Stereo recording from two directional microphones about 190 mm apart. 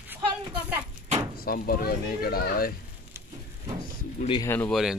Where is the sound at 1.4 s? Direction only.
50° left (ahead or behind).